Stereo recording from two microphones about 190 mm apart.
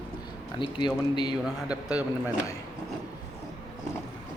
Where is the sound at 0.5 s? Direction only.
25° left (ahead or behind).